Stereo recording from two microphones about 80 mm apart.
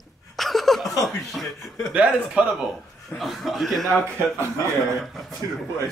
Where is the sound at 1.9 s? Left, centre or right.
Centre.